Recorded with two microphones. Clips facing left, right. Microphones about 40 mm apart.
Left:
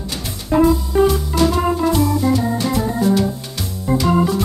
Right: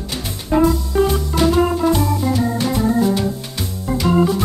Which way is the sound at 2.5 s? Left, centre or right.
Centre.